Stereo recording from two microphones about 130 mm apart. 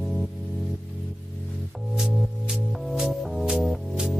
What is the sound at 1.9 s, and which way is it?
Music, 5° right (ahead or behind).